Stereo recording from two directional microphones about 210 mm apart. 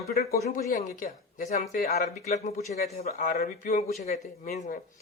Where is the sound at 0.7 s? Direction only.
35° left (ahead or behind).